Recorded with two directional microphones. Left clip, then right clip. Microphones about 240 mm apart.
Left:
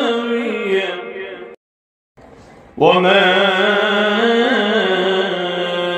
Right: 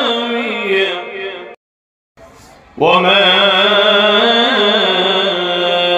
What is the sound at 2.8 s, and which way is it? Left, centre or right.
Mantra, centre.